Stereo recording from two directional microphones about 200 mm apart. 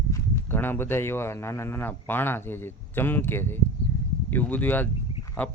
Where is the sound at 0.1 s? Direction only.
10° left (ahead or behind).